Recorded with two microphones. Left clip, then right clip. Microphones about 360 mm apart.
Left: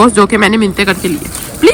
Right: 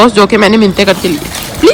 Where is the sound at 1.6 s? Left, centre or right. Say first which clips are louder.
Right 1 dB; centre.